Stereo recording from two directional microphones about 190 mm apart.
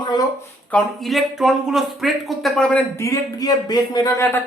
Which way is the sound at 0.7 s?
Centre (ahead or behind).